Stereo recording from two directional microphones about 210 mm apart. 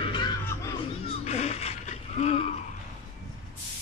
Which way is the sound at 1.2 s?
30° left (ahead or behind).